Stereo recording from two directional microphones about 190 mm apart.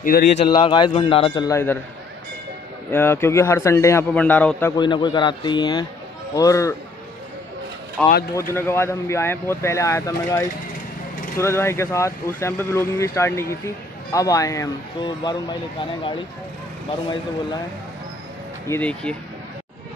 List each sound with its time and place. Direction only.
0.0 s speech: 50° left (ahead or behind)
0.5 s a man's voice: 25° left (ahead or behind)
2.9 s speech: 10° left (ahead or behind)
4.7 s a man's voice: 25° left (ahead or behind)
8.0 s speech: centre (ahead or behind)
8.4 s speech: 10° left (ahead or behind)
18.7 s speech: 5° left (ahead or behind)